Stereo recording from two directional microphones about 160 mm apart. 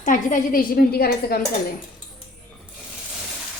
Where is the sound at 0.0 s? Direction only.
55° left (ahead or behind); by 1.4 s 70° left (ahead or behind).